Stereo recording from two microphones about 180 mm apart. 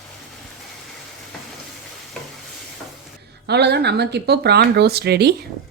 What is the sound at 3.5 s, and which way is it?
Speech, 65° right (ahead or behind).